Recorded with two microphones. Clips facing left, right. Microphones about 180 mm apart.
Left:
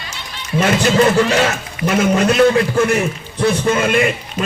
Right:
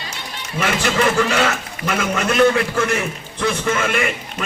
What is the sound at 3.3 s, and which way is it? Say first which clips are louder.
A man's voice: left 5 dB; 35° left (ahead or behind).